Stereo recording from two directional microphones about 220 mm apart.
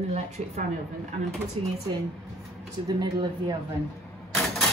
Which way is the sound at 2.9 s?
15° right (ahead or behind).